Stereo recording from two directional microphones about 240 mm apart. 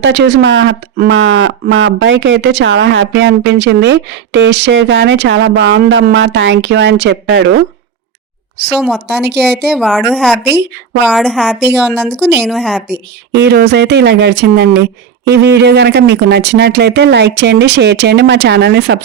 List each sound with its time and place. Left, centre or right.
0.0 s speech: right
8.7 s speech: centre
9.2 s speech: right
9.7 s speech: centre
10.4 s speech: right
11.0 s speech: centre
12.1 s speech: right
12.4 s speech: centre
13.3 s speech: right